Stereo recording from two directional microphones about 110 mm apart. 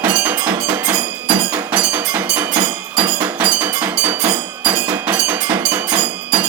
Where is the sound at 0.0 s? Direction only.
20° right (ahead or behind).